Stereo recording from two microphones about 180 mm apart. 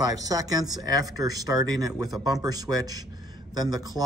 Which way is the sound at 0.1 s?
20° right (ahead or behind).